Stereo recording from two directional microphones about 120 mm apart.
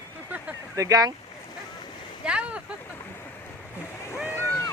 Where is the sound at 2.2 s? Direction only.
10° right (ahead or behind).